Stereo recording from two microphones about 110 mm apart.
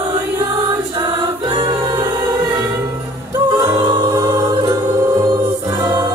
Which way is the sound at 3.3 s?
30° right (ahead or behind).